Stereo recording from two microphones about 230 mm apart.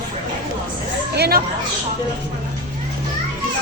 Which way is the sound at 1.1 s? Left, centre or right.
Right.